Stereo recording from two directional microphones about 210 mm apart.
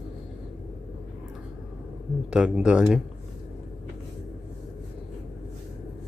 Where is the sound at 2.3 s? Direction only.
5° right (ahead or behind).